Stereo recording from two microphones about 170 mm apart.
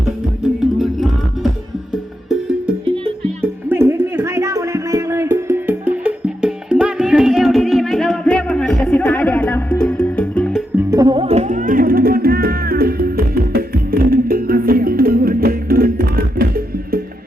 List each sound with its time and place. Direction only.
3.7 s music: 15° right (ahead or behind); by 10.6 s 5° left (ahead or behind)
10.9 s music: 25° right (ahead or behind); by 17.0 s 60° right (ahead or behind)